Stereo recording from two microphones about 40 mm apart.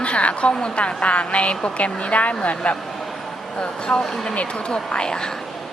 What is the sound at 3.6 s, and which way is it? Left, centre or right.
Speech, left.